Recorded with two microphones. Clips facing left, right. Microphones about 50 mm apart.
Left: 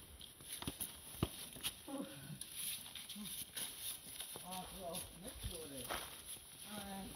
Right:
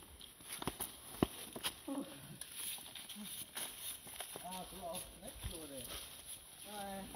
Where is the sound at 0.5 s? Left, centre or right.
Right.